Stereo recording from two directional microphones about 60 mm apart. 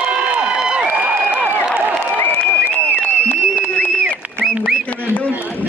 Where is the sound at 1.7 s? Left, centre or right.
Right.